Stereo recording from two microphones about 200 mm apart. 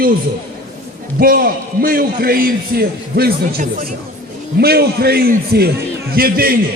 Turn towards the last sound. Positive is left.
turn(degrees=-50)  # may be behind; listen again after turning